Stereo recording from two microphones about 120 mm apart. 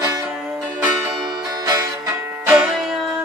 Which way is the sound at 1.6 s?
30° right (ahead or behind).